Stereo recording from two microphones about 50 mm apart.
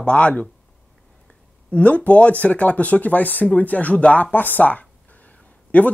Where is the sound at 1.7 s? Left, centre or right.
Left.